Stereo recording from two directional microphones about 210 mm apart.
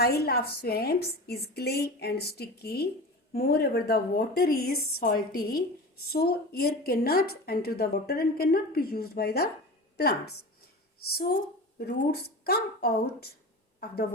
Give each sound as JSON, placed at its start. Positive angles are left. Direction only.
{"t": 0.0, "sound": "a woman's voice", "side_deg": 50}
{"t": 11.8, "sound": "a woman's voice", "side_deg": 50}